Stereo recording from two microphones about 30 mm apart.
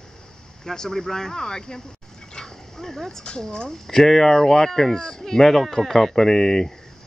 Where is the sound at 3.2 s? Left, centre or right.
Left.